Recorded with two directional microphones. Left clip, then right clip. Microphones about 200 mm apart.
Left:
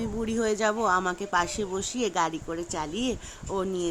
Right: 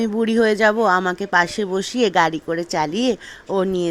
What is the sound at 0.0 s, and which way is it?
Speech, 25° right (ahead or behind).